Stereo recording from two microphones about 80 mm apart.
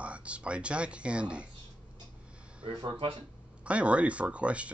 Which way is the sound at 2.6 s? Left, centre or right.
Right.